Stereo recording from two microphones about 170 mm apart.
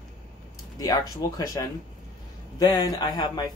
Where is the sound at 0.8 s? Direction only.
20° left (ahead or behind).